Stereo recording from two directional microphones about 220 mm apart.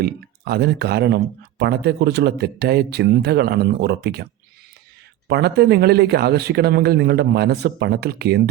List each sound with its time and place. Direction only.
0.0 s speech: 45° right (ahead or behind)
5.3 s speech: 50° right (ahead or behind)